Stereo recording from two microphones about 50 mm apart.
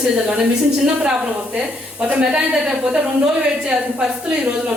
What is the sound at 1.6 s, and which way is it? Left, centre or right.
Speech, right.